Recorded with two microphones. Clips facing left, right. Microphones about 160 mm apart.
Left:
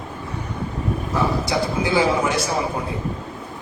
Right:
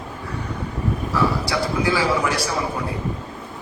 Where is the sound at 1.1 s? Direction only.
20° left (ahead or behind).